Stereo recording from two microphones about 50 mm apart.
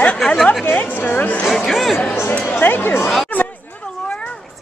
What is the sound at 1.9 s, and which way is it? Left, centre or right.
Speech, left.